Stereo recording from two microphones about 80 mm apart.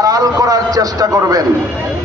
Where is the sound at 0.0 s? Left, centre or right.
Right.